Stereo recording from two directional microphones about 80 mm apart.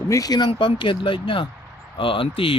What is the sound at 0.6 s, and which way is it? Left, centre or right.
Speech, left.